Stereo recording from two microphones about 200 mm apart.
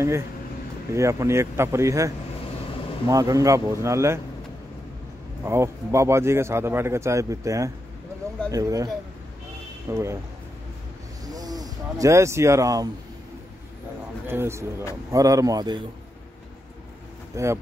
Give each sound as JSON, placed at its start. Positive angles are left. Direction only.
{"t": 0.9, "sound": "a man's voice", "side_deg": -15}
{"t": 5.4, "sound": "a man's voice", "side_deg": -15}
{"t": 11.2, "sound": "speech", "side_deg": -20}
{"t": 14.2, "sound": "a man's voice", "side_deg": -10}
{"t": 17.3, "sound": "a man's voice", "side_deg": -15}